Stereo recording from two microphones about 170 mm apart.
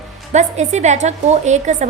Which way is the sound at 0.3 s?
40° right (ahead or behind).